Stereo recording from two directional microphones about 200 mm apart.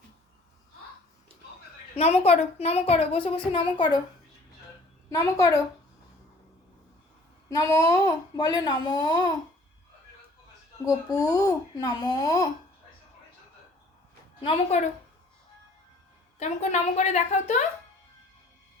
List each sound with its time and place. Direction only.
2.0 s a child's voice: 30° left (ahead or behind)
5.0 s speech: 15° left (ahead or behind)
7.5 s a child's voice: 15° left (ahead or behind)
10.8 s speech: 15° left (ahead or behind)
14.4 s a woman's voice: 35° left (ahead or behind)
16.4 s a woman's voice: 35° left (ahead or behind)